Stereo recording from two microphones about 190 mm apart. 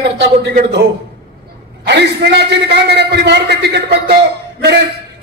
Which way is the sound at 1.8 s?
60° right (ahead or behind).